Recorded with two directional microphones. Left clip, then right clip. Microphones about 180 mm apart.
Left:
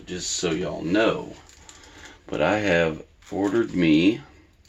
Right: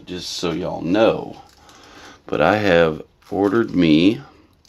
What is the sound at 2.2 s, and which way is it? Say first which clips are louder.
Speech: right 6 dB; 50° right (ahead or behind).